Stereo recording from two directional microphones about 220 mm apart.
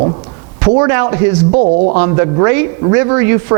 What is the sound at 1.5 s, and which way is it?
Speech, 35° right (ahead or behind).